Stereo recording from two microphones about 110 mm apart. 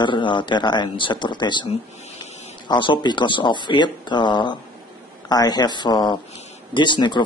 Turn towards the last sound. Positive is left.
turn(degrees=45)  # may be behind; listen again after turning